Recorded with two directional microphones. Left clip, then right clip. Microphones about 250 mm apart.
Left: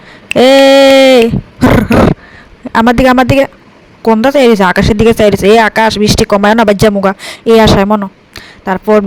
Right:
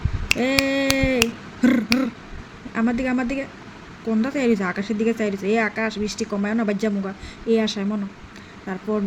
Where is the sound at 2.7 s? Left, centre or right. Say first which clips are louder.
Left 17 dB; left.